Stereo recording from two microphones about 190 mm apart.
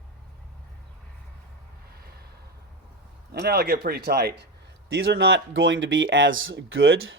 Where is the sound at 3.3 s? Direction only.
55° right (ahead or behind); by 7.1 s 90° right.